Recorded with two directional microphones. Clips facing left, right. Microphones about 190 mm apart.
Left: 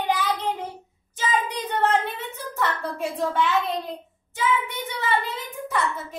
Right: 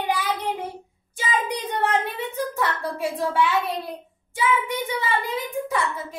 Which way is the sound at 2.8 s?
10° right (ahead or behind).